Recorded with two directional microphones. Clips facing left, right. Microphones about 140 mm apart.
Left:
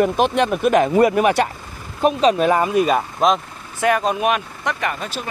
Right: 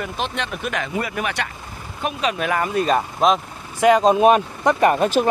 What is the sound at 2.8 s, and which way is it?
Speech, centre (ahead or behind).